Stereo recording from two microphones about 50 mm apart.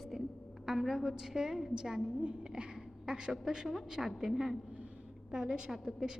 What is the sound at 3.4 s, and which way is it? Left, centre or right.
A woman's voice, centre.